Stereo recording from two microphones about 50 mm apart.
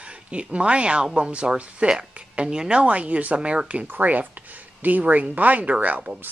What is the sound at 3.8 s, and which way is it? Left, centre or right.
Speech, right.